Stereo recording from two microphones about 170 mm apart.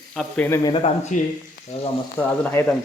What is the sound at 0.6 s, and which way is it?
Speech, 30° left (ahead or behind).